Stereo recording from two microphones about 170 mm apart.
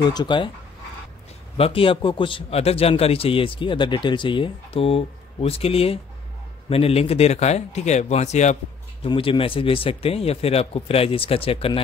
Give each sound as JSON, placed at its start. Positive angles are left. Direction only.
{"t": 0.0, "sound": "speech", "side_deg": 25}
{"t": 1.6, "sound": "a man's voice", "side_deg": 30}
{"t": 9.0, "sound": "a man's voice", "side_deg": 30}